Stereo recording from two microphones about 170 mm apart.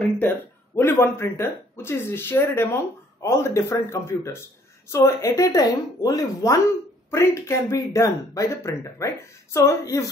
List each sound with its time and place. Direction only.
0.2 s a woman's voice: 15° left (ahead or behind)